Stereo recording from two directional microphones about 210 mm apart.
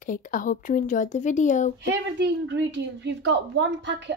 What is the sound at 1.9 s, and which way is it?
A woman's voice, 55° right (ahead or behind).